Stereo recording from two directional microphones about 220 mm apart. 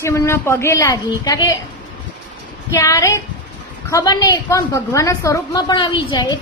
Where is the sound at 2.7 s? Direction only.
15° left (ahead or behind).